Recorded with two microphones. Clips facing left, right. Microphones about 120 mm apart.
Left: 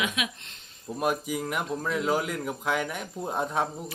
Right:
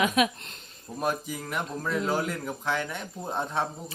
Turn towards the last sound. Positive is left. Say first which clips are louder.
# left 2 dB
turn(degrees=5)  # may be behind; listen again after turning